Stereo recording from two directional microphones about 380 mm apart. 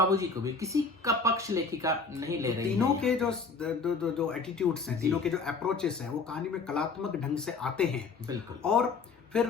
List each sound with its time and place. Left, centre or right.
0.1 s speech: centre